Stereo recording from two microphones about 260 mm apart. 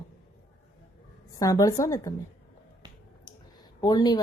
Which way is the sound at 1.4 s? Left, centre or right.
Centre.